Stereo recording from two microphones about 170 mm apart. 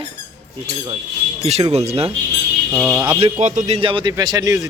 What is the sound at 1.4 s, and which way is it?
Speech, 35° right (ahead or behind).